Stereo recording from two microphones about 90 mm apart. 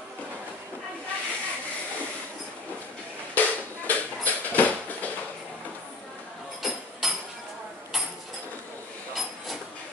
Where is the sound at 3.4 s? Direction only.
20° left (ahead or behind).